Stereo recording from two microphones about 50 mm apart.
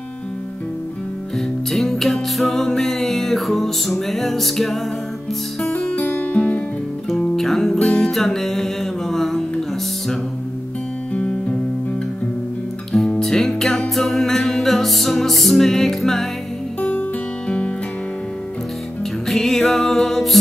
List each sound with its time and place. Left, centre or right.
1.7 s music: centre
5.7 s music: left
7.1 s music: centre
11.1 s music: left
12.9 s music: centre
17.5 s music: left
19.2 s music: centre